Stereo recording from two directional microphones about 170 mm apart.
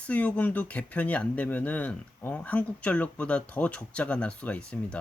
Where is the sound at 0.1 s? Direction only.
10° left (ahead or behind).